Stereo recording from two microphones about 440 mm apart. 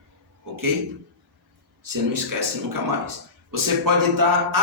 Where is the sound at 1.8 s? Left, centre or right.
Right.